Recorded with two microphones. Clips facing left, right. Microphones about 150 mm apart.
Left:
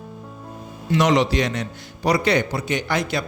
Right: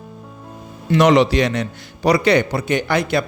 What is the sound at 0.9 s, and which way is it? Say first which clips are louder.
A man's voice: right 5 dB; 65° right (ahead or behind).